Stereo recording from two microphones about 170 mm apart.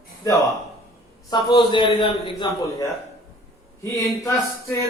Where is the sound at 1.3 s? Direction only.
25° left (ahead or behind).